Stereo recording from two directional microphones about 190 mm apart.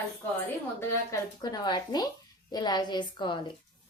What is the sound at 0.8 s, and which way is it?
A woman's voice, 20° left (ahead or behind).